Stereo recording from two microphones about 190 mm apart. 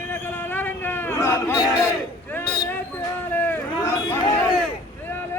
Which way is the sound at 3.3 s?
10° left (ahead or behind).